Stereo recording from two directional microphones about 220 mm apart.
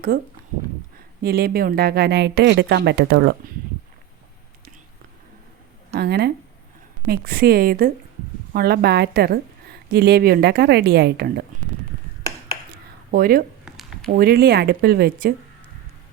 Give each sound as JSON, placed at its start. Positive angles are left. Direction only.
{"t": 1.2, "sound": "speech", "side_deg": -45}
{"t": 6.0, "sound": "speech", "side_deg": -45}
{"t": 13.1, "sound": "speech", "side_deg": -40}
{"t": 13.7, "sound": "a sound", "side_deg": 0}
{"t": 14.1, "sound": "speech", "side_deg": -45}